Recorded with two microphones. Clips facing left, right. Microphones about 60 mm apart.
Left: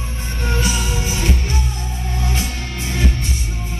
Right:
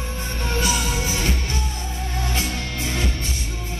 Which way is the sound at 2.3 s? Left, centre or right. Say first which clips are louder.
Left 1 dB; right.